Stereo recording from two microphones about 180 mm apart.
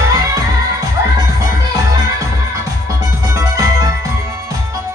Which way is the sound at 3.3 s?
20° right (ahead or behind).